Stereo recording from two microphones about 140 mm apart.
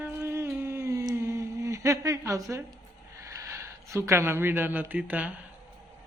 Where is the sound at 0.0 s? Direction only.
15° right (ahead or behind).